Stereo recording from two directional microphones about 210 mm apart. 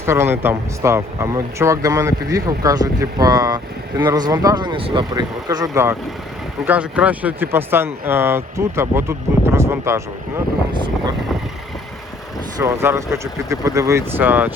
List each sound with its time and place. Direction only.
0.0 s speech: 10° right (ahead or behind)
12.5 s speech: 15° right (ahead or behind)